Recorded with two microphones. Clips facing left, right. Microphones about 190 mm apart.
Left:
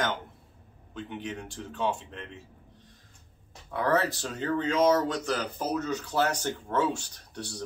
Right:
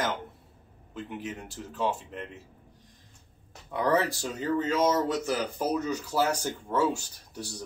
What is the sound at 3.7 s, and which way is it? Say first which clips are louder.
Speech: right 1 dB; 15° right (ahead or behind).